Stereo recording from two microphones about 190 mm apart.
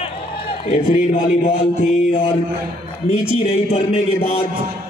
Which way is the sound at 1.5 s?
30° left (ahead or behind).